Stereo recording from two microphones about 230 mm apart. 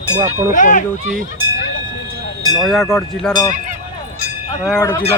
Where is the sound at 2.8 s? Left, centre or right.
Centre.